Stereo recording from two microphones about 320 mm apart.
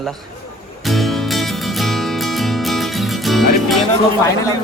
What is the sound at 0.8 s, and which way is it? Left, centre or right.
Music, centre.